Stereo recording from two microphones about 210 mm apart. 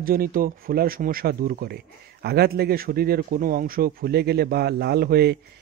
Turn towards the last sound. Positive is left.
turn(degrees=-50)  # may be behind; listen again after turning